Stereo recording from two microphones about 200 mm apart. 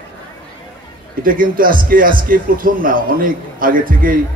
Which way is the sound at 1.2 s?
45° right (ahead or behind).